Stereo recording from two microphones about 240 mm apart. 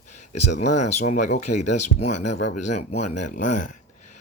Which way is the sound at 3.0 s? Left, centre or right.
Left.